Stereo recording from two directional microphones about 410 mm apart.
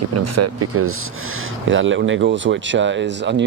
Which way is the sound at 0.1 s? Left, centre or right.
Right.